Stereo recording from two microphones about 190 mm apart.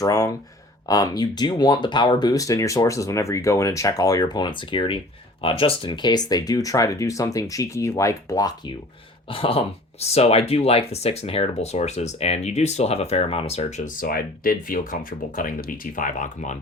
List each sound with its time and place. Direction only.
0.0 s speech: 20° left (ahead or behind)
9.3 s speech: 30° left (ahead or behind)